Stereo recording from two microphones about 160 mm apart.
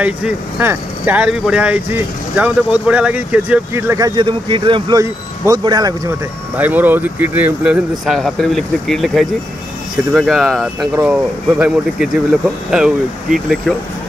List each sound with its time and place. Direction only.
0.0 s speech: 10° right (ahead or behind); by 5.9 s 25° right (ahead or behind)
6.5 s speech: 10° right (ahead or behind)